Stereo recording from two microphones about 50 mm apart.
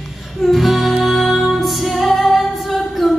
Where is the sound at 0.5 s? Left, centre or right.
Centre.